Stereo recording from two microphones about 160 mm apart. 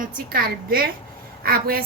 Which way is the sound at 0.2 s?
70° right (ahead or behind).